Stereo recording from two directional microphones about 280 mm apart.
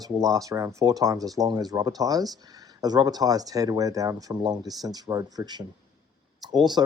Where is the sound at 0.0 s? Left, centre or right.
Centre.